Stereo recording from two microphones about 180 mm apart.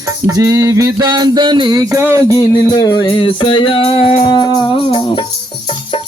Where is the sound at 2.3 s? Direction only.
20° left (ahead or behind).